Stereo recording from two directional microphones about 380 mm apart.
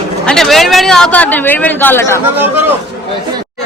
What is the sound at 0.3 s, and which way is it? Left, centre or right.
A man's voice, centre.